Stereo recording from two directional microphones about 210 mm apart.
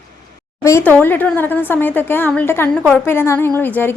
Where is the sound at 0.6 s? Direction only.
10° left (ahead or behind).